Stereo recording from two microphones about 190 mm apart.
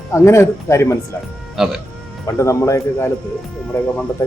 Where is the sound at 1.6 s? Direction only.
Centre (ahead or behind).